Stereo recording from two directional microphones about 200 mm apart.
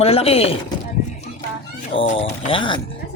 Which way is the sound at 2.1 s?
25° left (ahead or behind).